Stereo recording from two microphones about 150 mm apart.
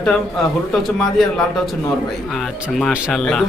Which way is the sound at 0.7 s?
Centre (ahead or behind).